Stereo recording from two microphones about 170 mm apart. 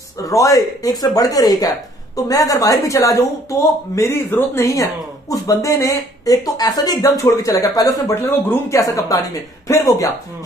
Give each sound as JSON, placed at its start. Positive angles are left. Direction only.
{"t": 0.2, "sound": "speech", "side_deg": 20}